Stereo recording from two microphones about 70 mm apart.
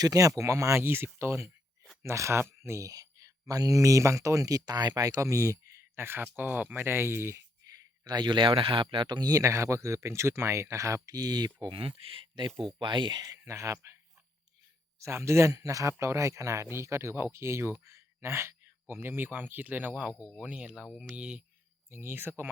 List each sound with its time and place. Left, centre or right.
0.0 s speech: right
2.9 s speech: right
5.2 s speech: right
7.6 s a sound: right
9.0 s speech: right
9.3 s speech: right
12.9 s speech: right
13.5 s speech: right; by 21.4 s centre
21.8 s speech: right